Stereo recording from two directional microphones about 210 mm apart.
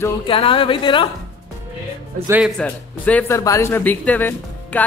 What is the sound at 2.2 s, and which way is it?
Speech, 10° right (ahead or behind).